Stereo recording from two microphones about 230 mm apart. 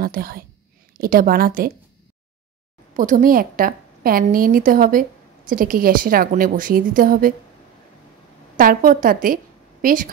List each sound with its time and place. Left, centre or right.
0.0 s a woman's voice: right
3.0 s a woman's voice: right
8.5 s a woman's voice: right